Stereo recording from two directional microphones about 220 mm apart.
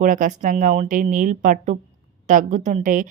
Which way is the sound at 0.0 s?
35° right (ahead or behind).